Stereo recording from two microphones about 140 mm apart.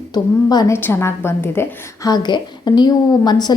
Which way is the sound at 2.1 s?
30° left (ahead or behind).